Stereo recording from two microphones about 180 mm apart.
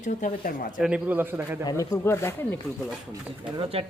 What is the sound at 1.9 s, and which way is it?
Speech, 15° left (ahead or behind).